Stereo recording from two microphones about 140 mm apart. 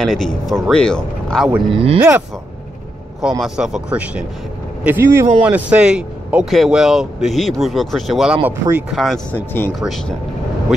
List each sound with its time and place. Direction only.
0.0 s speech: 5° left (ahead or behind)
2.0 s speech: 10° right (ahead or behind)
5.4 s speech: 10° right (ahead or behind)
8.5 s speech: 15° right (ahead or behind)
8.9 s speech: centre (ahead or behind)
9.3 s speech: 15° left (ahead or behind)